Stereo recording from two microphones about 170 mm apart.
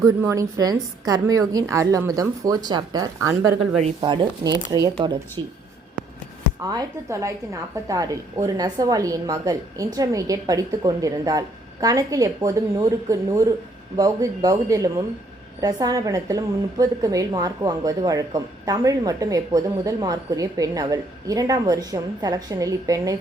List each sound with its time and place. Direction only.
0.0 s a woman's voice: 15° right (ahead or behind)
6.7 s a woman's voice: 20° right (ahead or behind)